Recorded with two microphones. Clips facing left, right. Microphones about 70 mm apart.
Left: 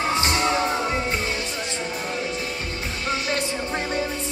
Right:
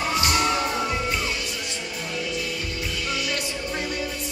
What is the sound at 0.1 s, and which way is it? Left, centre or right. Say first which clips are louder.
Music: right 1 dB; left.